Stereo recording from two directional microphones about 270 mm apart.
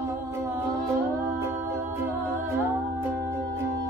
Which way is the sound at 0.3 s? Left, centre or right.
Centre.